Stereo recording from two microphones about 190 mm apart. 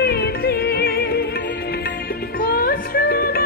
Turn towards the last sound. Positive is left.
turn(degrees=50)  # may be behind; listen again after turning